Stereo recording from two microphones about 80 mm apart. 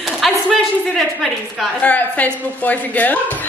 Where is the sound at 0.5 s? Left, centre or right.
Centre.